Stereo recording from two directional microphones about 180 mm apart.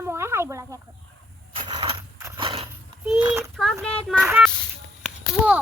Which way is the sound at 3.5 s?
Centre (ahead or behind).